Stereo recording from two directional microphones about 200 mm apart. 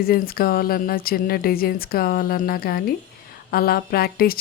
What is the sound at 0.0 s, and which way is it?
A woman's voice, 50° left (ahead or behind).